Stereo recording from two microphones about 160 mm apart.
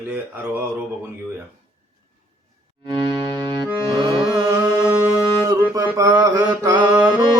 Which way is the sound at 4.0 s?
30° right (ahead or behind).